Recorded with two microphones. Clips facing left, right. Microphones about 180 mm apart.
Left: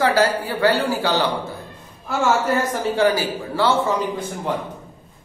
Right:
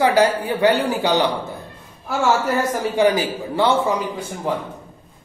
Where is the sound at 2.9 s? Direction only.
20° right (ahead or behind).